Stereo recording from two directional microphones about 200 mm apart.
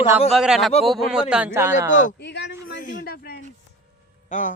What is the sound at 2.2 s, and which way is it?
Speech, 60° left (ahead or behind).